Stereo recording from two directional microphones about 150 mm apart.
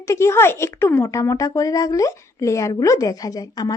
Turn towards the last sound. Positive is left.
turn(degrees=25)  # may be behind; listen again after turning